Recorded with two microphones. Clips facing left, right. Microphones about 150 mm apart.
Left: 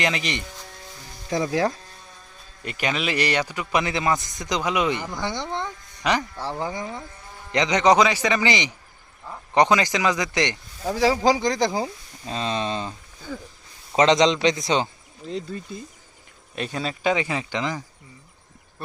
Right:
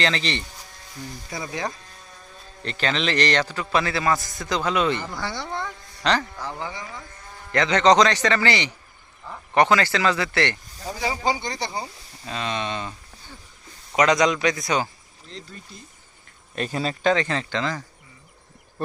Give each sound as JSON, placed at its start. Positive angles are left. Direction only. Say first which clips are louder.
{"t": 0.0, "sound": "a man's voice", "louder": "right 1 dB", "side_deg": 15}
{"t": 1.3, "sound": "speech", "louder": "left 10 dB", "side_deg": 90}
{"t": 2.6, "sound": "a man's voice", "louder": "right 1 dB", "side_deg": 10}
{"t": 6.3, "sound": "speech", "louder": "left 4 dB", "side_deg": 30}
{"t": 7.5, "sound": "a man's voice", "louder": "right 1 dB", "side_deg": 15}
{"t": 10.8, "sound": "speech", "louder": "left 6 dB", "side_deg": 80}
{"t": 12.2, "sound": "speech", "louder": "left 2 dB", "side_deg": 30}
{"t": 13.9, "sound": "a man's voice", "louder": "left 2 dB", "side_deg": 25}
{"t": 15.2, "sound": "speech", "louder": "left 11 dB", "side_deg": 90}
{"t": 16.6, "sound": "a man's voice", "louder": "right 2 dB", "side_deg": 0}